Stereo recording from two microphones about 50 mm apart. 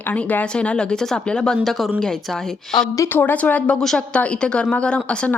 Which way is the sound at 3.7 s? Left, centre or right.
Centre.